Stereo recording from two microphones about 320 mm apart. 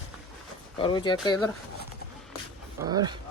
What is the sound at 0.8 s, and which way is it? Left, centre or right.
Speech, centre.